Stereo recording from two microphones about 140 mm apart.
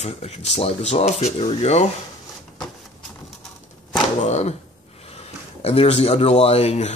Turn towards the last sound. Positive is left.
turn(degrees=50)  # may be behind; listen again after turning